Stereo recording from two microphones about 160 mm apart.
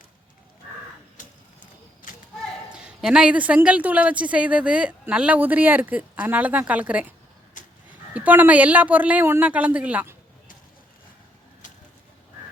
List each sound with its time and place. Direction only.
2.7 s a woman's voice: 5° right (ahead or behind)
7.6 s a sound: 55° left (ahead or behind)
8.1 s a woman's voice: 10° right (ahead or behind)